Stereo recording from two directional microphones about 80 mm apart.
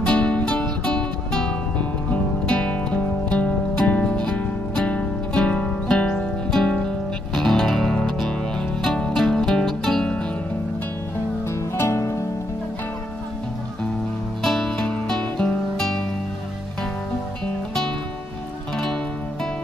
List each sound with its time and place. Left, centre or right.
0.0 s music: centre
11.7 s music: left
14.4 s music: centre